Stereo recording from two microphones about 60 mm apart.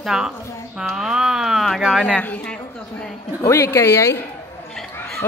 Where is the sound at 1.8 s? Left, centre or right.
Centre.